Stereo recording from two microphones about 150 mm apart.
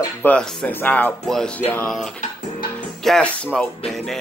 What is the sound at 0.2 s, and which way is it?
Speech, 5° left (ahead or behind).